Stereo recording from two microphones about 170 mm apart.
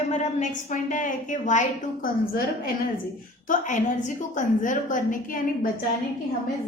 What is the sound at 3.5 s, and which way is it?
A woman's voice, 45° left (ahead or behind).